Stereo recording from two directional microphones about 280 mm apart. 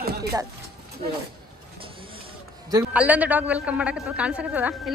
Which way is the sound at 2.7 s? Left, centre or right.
Centre.